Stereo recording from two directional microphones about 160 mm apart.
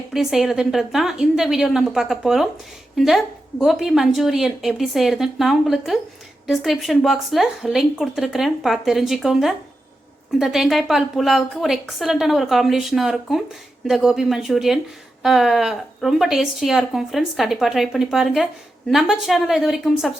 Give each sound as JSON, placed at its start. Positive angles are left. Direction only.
{"t": 0.1, "sound": "a woman's voice", "side_deg": 0}